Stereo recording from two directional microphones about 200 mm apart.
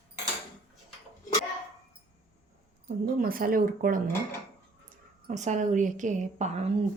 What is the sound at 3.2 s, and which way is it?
Speech, 45° right (ahead or behind).